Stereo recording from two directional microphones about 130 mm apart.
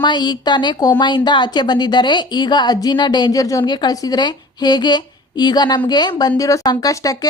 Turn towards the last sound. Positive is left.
turn(degrees=25)  # may be behind; listen again after turning